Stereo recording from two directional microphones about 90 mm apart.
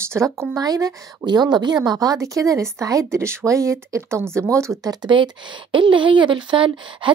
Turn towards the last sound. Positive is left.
turn(degrees=-70)  # may be behind; listen again after turning